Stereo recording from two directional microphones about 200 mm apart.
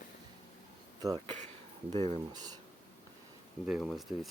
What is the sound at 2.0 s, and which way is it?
Speech, 20° right (ahead or behind).